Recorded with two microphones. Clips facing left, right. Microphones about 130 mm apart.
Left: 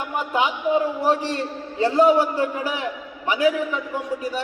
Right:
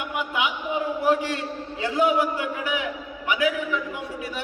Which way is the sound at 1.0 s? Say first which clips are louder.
Left 1 dB; 35° left (ahead or behind).